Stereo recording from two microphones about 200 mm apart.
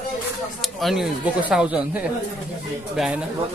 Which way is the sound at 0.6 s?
Centre (ahead or behind).